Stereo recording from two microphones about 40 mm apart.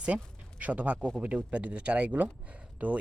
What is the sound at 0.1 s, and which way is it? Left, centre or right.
Speech, right.